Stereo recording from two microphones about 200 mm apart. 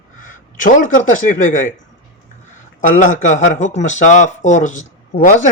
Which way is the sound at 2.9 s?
40° left (ahead or behind).